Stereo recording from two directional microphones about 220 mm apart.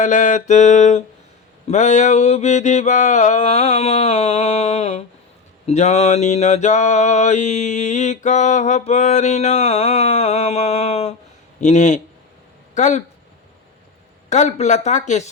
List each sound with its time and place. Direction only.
0.0 s mantra: 35° left (ahead or behind)
12.7 s speech: 35° left (ahead or behind)
14.3 s mantra: 30° left (ahead or behind)